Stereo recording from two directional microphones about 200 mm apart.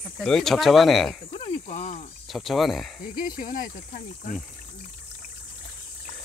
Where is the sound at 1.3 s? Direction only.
35° left (ahead or behind).